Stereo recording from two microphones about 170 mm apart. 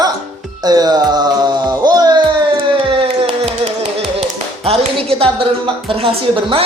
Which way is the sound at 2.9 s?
35° right (ahead or behind).